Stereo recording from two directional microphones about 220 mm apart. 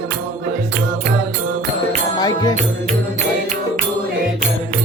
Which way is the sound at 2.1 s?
20° left (ahead or behind).